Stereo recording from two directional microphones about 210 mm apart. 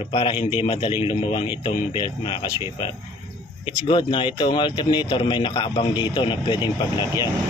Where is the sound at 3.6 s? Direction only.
25° left (ahead or behind).